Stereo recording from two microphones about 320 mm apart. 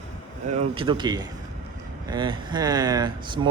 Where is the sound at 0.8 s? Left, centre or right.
Centre.